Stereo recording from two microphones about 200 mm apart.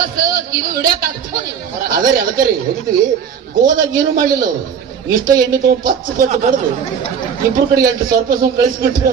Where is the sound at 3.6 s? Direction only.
45° right (ahead or behind).